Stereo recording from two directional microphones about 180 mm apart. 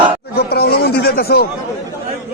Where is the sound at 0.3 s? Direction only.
60° left (ahead or behind).